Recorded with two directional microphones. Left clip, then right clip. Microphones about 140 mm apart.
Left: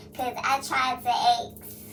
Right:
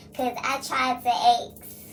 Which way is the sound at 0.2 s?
40° right (ahead or behind).